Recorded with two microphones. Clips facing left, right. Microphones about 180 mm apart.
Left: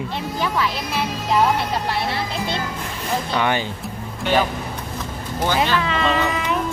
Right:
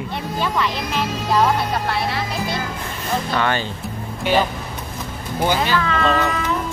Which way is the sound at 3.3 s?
15° left (ahead or behind).